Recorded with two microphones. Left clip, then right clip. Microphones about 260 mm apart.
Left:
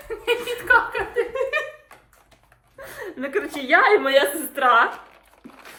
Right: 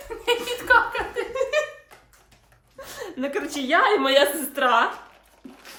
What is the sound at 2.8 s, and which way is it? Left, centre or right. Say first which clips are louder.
A woman's voice: even; centre.